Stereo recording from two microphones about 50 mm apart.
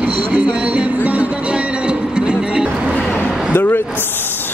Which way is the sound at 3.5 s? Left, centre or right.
Left.